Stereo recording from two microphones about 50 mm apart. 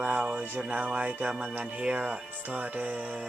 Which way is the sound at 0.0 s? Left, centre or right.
Right.